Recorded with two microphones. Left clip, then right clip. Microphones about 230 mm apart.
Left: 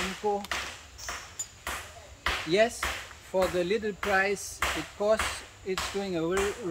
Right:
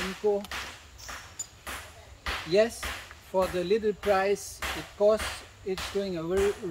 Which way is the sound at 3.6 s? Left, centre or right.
Centre.